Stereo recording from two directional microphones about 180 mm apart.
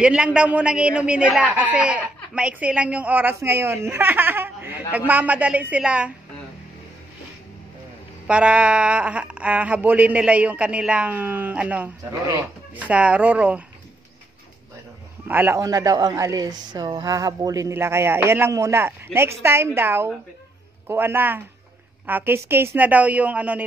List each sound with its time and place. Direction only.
0.0 s a man's voice: 5° right (ahead or behind)
8.3 s a man's voice: 5° right (ahead or behind)
15.2 s a man's voice: 10° right (ahead or behind)